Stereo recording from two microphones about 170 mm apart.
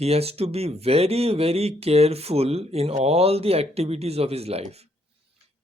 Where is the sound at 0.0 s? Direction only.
35° right (ahead or behind).